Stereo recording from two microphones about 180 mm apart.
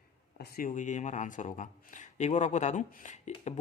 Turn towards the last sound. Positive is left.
turn(degrees=40)  # may be behind; listen again after turning